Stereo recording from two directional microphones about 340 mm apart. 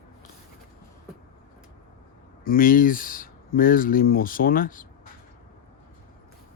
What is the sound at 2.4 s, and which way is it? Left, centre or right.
Speech, left.